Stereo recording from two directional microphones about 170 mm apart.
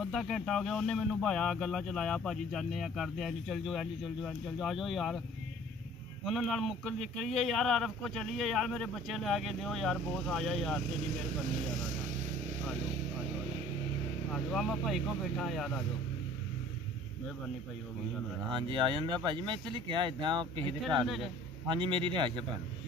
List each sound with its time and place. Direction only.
0.0 s speech: centre (ahead or behind)
6.2 s speech: centre (ahead or behind)
14.3 s speech: centre (ahead or behind)
18.5 s speech: 30° right (ahead or behind)
21.0 s speech: centre (ahead or behind)
21.6 s speech: 30° right (ahead or behind)